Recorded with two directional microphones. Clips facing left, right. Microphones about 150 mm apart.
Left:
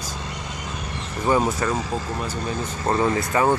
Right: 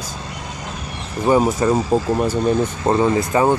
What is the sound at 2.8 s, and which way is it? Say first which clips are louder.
Speech: right 3 dB; 20° right (ahead or behind).